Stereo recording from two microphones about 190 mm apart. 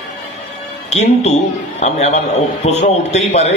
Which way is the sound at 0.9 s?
35° left (ahead or behind).